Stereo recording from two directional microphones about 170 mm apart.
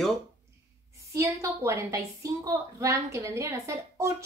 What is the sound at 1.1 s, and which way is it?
A woman's voice, 20° right (ahead or behind).